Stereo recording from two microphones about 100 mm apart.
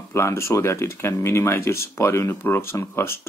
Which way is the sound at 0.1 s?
25° left (ahead or behind).